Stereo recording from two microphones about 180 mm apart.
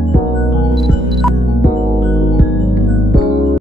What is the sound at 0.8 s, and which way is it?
Music, centre (ahead or behind).